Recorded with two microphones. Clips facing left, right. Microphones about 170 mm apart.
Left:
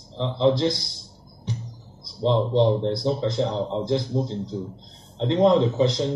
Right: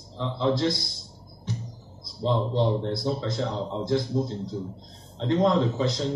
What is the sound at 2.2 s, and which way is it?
Speech, 15° left (ahead or behind).